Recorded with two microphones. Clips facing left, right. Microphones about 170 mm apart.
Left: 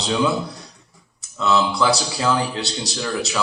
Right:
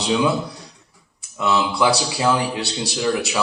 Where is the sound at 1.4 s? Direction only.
10° right (ahead or behind).